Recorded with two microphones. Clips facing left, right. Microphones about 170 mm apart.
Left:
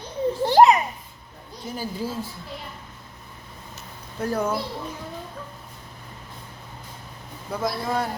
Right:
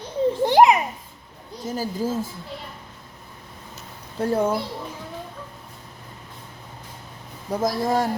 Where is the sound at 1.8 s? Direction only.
45° right (ahead or behind).